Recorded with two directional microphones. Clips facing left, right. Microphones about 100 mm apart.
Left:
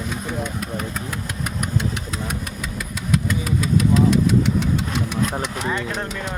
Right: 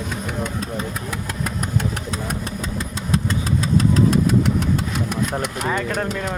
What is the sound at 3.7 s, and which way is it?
Engine, 40° right (ahead or behind).